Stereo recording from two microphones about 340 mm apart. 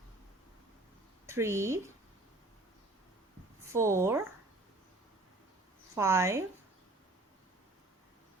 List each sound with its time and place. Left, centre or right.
1.3 s speech: centre
3.7 s speech: centre
5.9 s speech: centre